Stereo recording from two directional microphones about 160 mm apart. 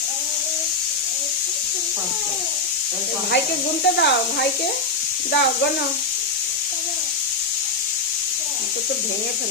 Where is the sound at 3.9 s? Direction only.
90° left.